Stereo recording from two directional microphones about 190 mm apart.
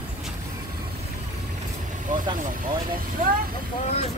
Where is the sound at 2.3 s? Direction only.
45° right (ahead or behind).